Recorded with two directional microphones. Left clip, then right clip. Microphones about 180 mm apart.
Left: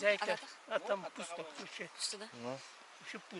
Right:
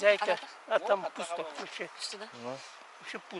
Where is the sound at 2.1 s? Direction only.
5° left (ahead or behind).